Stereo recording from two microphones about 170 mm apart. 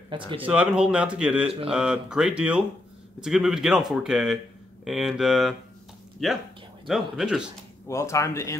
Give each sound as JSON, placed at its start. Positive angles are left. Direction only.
{"t": 0.1, "sound": "speech", "side_deg": -30}
{"t": 0.5, "sound": "speech", "side_deg": -5}
{"t": 7.9, "sound": "speech", "side_deg": 15}